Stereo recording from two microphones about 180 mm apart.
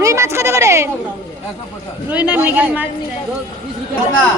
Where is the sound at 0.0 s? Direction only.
15° right (ahead or behind).